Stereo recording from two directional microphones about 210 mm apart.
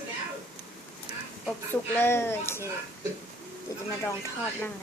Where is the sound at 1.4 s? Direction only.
10° left (ahead or behind).